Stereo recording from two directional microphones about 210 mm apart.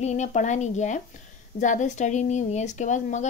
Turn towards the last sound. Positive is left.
turn(degrees=35)  # may be behind; listen again after turning